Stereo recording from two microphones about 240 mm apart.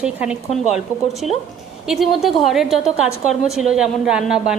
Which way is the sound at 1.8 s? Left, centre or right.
Centre.